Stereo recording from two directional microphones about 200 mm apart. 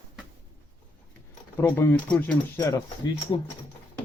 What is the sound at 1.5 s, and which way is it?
Speech, 10° left (ahead or behind).